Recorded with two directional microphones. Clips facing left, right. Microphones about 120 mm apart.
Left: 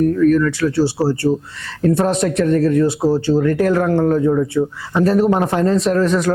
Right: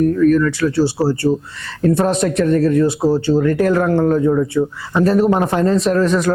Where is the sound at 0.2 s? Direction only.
25° right (ahead or behind).